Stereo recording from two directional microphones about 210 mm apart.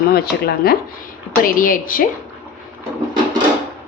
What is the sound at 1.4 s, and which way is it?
Speech, 40° left (ahead or behind).